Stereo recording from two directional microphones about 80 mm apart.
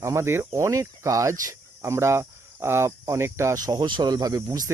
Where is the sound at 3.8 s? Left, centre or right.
Right.